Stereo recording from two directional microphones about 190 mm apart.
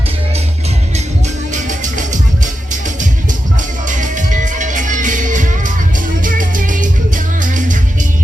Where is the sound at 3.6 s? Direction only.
40° right (ahead or behind).